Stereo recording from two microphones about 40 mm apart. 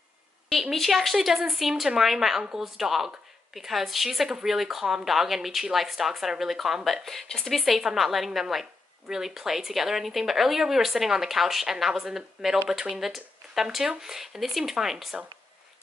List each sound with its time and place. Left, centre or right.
0.6 s speech: centre
12.4 s speech: centre
12.9 s speech: centre